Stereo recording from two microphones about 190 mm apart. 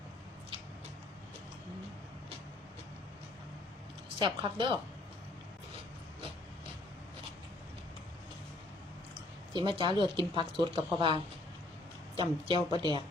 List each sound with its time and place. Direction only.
4.2 s speech: 25° right (ahead or behind)
9.5 s speech: 25° right (ahead or behind)